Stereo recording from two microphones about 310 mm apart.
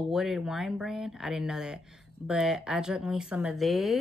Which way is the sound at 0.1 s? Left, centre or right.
Centre.